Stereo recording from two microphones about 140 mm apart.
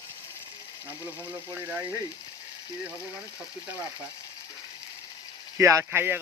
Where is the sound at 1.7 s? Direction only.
15° right (ahead or behind).